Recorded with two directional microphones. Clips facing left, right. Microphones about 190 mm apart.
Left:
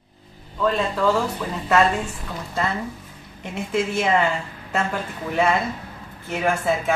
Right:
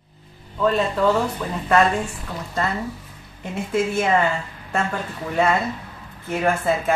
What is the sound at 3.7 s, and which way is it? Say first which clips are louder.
Speech: right 1 dB; centre (ahead or behind).